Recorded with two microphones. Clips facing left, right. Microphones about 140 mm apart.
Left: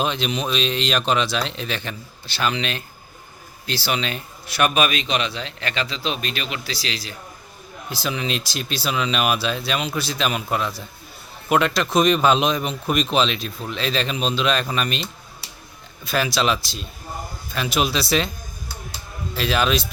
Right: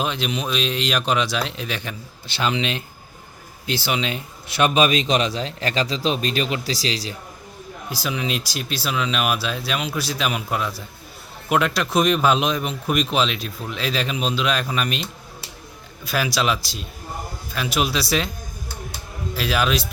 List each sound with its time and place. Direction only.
0.0 s speech: 5° right (ahead or behind)
2.2 s speech: 20° right (ahead or behind)
8.0 s speech: 5° right (ahead or behind)
16.0 s speech: 5° right (ahead or behind)
19.4 s speech: 5° right (ahead or behind)